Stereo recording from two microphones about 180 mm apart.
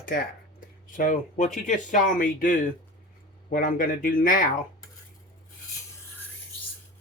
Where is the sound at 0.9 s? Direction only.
45° left (ahead or behind).